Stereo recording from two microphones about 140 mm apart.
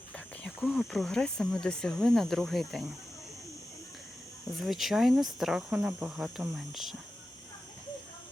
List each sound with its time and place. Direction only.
0.4 s speech: 5° left (ahead or behind)
4.6 s speech: centre (ahead or behind)